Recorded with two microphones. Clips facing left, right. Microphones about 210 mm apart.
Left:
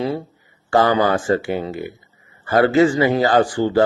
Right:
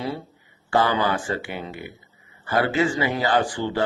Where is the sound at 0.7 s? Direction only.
45° left (ahead or behind).